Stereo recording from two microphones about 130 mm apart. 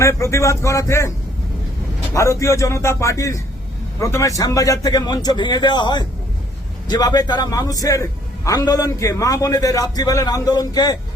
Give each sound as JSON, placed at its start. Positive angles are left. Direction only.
{"t": 0.0, "sound": "a man's voice", "side_deg": 20}
{"t": 2.1, "sound": "a man's voice", "side_deg": 25}